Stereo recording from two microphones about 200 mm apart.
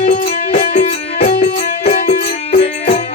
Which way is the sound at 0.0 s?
35° left (ahead or behind).